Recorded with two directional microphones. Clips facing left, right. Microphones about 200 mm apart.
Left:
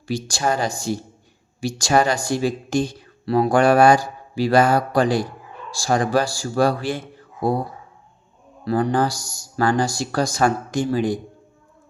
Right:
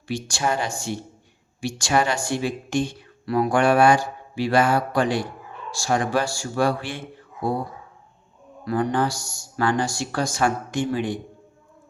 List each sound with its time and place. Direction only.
0.1 s speech: 35° left (ahead or behind)
8.6 s speech: 35° left (ahead or behind)